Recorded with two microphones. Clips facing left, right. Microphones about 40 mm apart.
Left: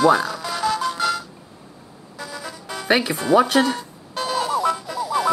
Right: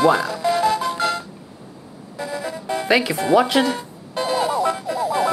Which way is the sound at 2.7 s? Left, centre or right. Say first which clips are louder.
Right 1 dB; right.